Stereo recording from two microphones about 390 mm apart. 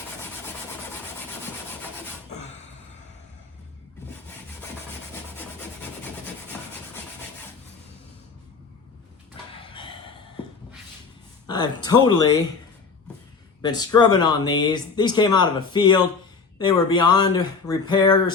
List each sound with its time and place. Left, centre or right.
9.7 s a sound: centre
11.4 s speech: centre
13.6 s speech: centre